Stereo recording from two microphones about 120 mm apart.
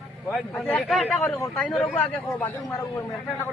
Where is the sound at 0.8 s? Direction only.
Centre (ahead or behind).